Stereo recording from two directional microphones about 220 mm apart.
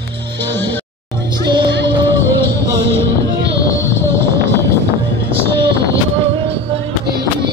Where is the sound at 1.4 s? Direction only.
20° right (ahead or behind).